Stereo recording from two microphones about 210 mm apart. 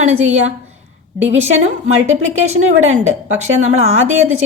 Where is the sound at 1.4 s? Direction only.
35° right (ahead or behind).